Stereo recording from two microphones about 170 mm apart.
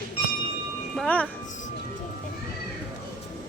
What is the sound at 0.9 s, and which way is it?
Speech, 5° left (ahead or behind).